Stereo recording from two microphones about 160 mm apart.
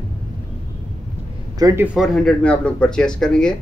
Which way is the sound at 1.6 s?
15° right (ahead or behind).